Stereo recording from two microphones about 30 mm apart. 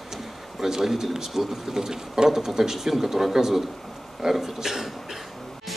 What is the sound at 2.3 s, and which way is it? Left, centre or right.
A man's voice, centre.